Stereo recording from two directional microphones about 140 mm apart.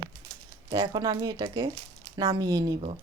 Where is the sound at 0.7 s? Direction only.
30° right (ahead or behind).